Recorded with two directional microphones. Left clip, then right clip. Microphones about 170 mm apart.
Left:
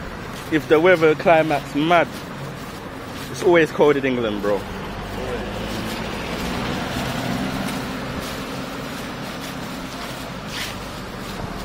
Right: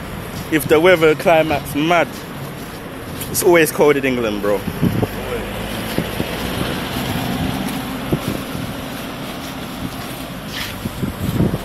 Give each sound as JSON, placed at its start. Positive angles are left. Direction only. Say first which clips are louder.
{"t": 0.5, "sound": "speech", "louder": "right 3 dB", "side_deg": -5}
{"t": 3.4, "sound": "speech", "louder": "right 3 dB", "side_deg": -5}
{"t": 6.3, "sound": "vehicle", "louder": "right 3 dB", "side_deg": 60}